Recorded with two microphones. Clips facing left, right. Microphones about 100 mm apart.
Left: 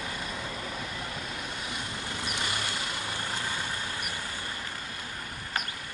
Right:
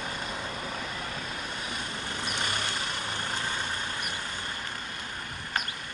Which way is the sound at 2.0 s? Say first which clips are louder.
Right 1 dB; 50° right (ahead or behind).